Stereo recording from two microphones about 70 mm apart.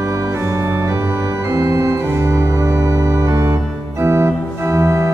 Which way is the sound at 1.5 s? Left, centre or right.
Right.